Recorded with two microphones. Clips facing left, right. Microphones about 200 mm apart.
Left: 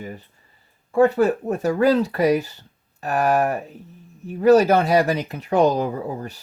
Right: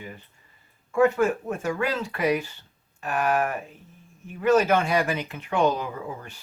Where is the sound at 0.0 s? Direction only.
40° left (ahead or behind).